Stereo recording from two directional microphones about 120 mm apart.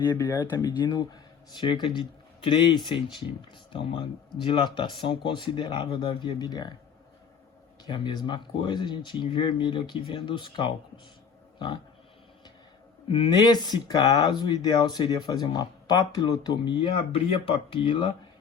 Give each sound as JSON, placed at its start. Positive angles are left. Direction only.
{"t": 0.2, "sound": "speech", "side_deg": 20}
{"t": 0.9, "sound": "speech", "side_deg": 35}
{"t": 7.9, "sound": "speech", "side_deg": 40}
{"t": 13.1, "sound": "speech", "side_deg": 45}